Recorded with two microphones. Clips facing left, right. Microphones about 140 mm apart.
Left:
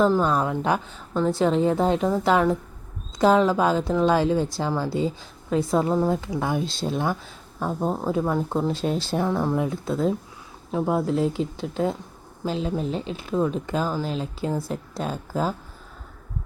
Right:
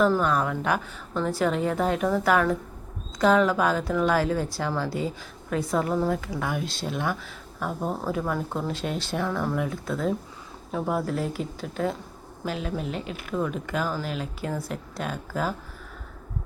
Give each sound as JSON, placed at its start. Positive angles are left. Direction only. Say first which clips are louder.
{"t": 0.0, "sound": "a woman's voice", "louder": "left 2 dB", "side_deg": 25}